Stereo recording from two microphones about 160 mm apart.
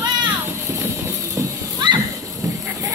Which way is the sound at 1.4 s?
25° right (ahead or behind).